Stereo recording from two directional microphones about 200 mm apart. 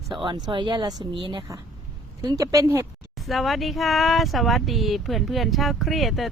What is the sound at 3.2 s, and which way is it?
Speech, centre (ahead or behind).